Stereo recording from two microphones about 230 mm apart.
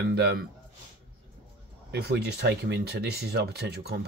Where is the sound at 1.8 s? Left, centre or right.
Right.